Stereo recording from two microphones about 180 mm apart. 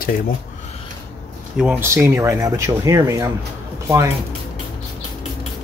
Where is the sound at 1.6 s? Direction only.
10° right (ahead or behind).